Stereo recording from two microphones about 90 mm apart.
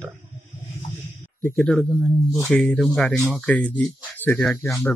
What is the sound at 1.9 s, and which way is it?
Speech, 10° right (ahead or behind).